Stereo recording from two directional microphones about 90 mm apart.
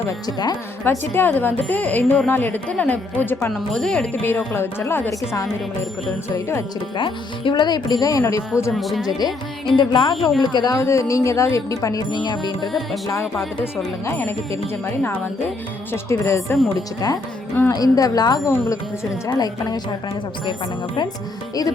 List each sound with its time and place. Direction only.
0.3 s speech: 50° left (ahead or behind)
0.9 s a woman's voice: 25° left (ahead or behind)
3.5 s speech: 5° left (ahead or behind)
4.1 s a woman's voice: 25° left (ahead or behind)
6.9 s speech: 65° left (ahead or behind)
7.5 s speech: 50° left (ahead or behind)
8.7 s speech: centre (ahead or behind)
9.0 s speech: 50° left (ahead or behind)
10.2 s speech: centre (ahead or behind)
10.5 s speech: 50° left (ahead or behind)
10.8 s a woman's voice: 35° left (ahead or behind)
12.6 s speech: centre (ahead or behind)
14.8 s a woman's voice: 25° left (ahead or behind)
17.7 s speech: 45° left (ahead or behind)